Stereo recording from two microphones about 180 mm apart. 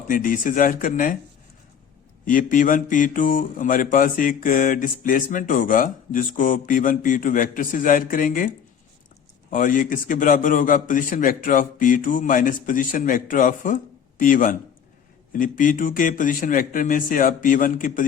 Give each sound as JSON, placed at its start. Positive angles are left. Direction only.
{"t": 0.1, "sound": "speech", "side_deg": 50}
{"t": 2.2, "sound": "speech", "side_deg": 50}
{"t": 9.5, "sound": "speech", "side_deg": 50}